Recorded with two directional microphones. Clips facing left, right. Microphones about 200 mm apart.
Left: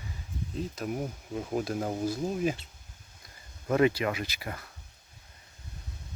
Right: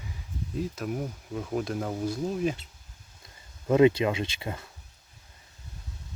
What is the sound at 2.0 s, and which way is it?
Speech, 5° left (ahead or behind).